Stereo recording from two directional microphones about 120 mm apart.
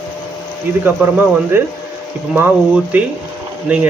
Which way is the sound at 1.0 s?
15° right (ahead or behind).